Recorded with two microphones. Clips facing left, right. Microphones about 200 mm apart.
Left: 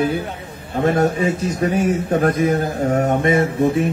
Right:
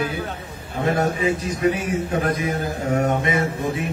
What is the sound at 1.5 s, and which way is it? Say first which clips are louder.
A man's voice: left 3 dB; 45° left (ahead or behind).